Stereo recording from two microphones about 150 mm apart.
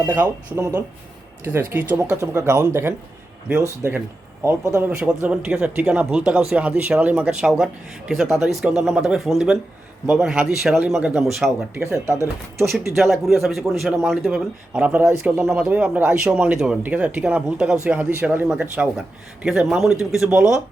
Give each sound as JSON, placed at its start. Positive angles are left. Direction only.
{"t": 0.1, "sound": "speech", "side_deg": -15}
{"t": 4.4, "sound": "speech", "side_deg": -15}
{"t": 4.9, "sound": "speech", "side_deg": -5}
{"t": 11.7, "sound": "speech", "side_deg": -15}
{"t": 12.6, "sound": "speech", "side_deg": 0}